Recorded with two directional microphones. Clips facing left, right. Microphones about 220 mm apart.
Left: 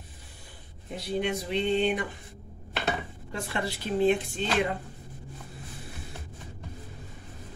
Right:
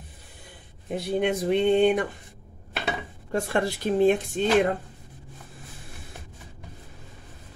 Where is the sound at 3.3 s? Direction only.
50° right (ahead or behind).